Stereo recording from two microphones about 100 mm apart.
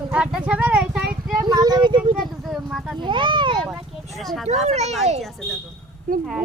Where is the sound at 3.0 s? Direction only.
55° right (ahead or behind).